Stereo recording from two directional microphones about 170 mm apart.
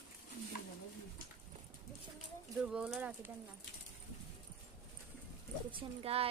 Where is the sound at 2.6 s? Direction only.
5° right (ahead or behind).